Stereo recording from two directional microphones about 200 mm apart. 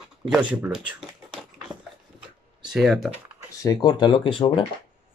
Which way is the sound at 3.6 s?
20° left (ahead or behind).